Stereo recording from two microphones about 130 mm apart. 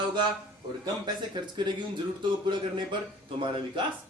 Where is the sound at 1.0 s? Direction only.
35° right (ahead or behind).